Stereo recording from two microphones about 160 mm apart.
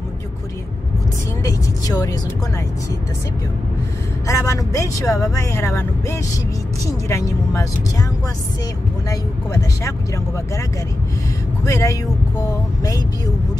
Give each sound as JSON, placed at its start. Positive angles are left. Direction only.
{"t": 1.4, "sound": "speech", "side_deg": 20}
{"t": 4.3, "sound": "speech", "side_deg": 20}
{"t": 9.1, "sound": "speech", "side_deg": 20}
{"t": 11.6, "sound": "speech", "side_deg": 20}